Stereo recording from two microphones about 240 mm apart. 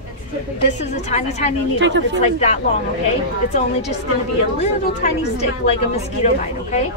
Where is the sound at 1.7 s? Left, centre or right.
Right.